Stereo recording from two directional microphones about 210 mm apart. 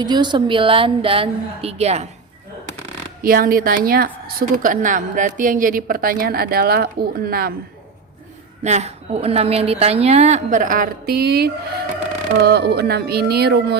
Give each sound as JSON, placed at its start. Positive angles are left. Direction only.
{"t": 0.0, "sound": "a woman's voice", "side_deg": -20}
{"t": 3.2, "sound": "a woman's voice", "side_deg": -45}
{"t": 8.6, "sound": "a woman's voice", "side_deg": -30}